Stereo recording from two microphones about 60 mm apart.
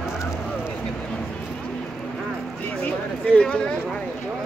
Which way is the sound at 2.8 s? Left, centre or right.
Left.